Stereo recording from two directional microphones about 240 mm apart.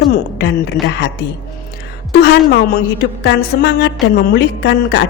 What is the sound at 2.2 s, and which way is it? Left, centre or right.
A woman's voice, left.